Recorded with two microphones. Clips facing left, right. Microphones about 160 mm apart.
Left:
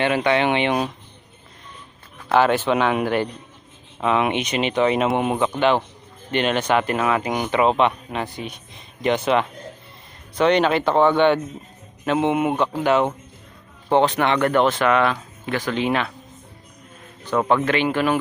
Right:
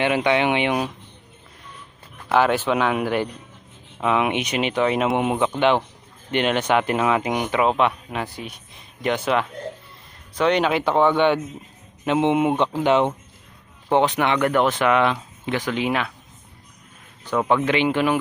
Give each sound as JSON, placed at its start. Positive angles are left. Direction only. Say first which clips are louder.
{"t": 0.0, "sound": "speech", "louder": "even", "side_deg": -15}
{"t": 2.3, "sound": "speech", "louder": "left 1 dB", "side_deg": -10}
{"t": 17.2, "sound": "speech", "louder": "left 1 dB", "side_deg": -15}